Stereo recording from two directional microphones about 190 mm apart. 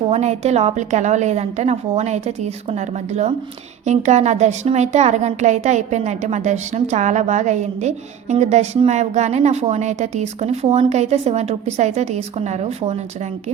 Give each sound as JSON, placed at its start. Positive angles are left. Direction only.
{"t": 0.1, "sound": "a woman's voice", "side_deg": -35}